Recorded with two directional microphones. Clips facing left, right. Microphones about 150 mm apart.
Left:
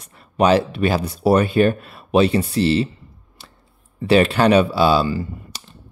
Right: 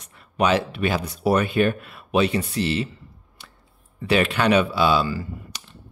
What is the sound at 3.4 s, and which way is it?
Scissors, 30° left (ahead or behind).